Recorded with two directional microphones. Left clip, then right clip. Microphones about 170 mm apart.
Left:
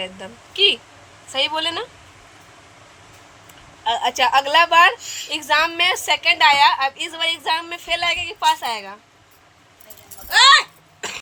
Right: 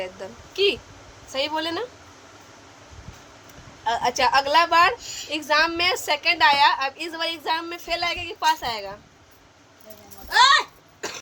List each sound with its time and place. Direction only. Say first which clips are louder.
0.0 s a woman's voice: left 2 dB; centre (ahead or behind)
3.8 s a woman's voice: left 3 dB; 5° left (ahead or behind)
4.9 s a woman's voice: left 4 dB; 20° right (ahead or behind)
5.3 s a woman's voice: left 2 dB; centre (ahead or behind)
10.2 s speech: left 4 dB; 40° right (ahead or behind)